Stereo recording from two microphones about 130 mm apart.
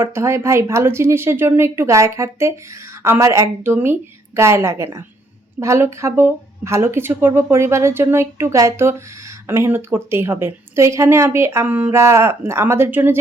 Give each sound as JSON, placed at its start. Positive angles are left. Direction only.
{"t": 0.0, "sound": "speech", "side_deg": -20}